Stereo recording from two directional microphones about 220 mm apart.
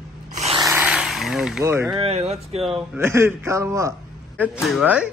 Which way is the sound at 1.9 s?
30° right (ahead or behind).